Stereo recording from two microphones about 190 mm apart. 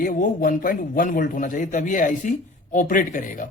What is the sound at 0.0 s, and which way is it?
Speech, 45° left (ahead or behind).